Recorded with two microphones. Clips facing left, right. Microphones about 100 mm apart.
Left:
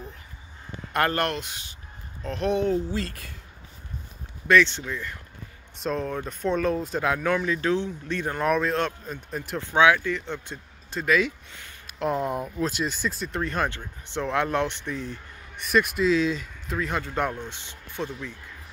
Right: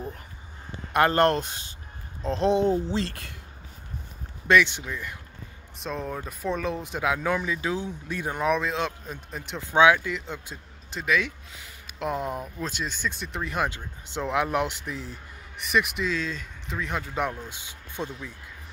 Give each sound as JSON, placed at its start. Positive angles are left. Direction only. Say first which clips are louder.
{"t": 0.9, "sound": "speech", "louder": "right 4 dB", "side_deg": -25}
{"t": 1.3, "sound": "speech", "louder": "right 5 dB", "side_deg": -35}
{"t": 2.2, "sound": "speech", "louder": "right 2 dB", "side_deg": -25}
{"t": 4.5, "sound": "speech", "louder": "left 1 dB", "side_deg": -15}
{"t": 5.8, "sound": "speech", "louder": "left 4 dB", "side_deg": 0}
{"t": 8.5, "sound": "speech", "louder": "left 2 dB", "side_deg": 0}
{"t": 9.7, "sound": "speech", "louder": "right 1 dB", "side_deg": -20}
{"t": 15.5, "sound": "speech", "louder": "left 2 dB", "side_deg": 0}
{"t": 17.9, "sound": "speech", "louder": "left 2 dB", "side_deg": -15}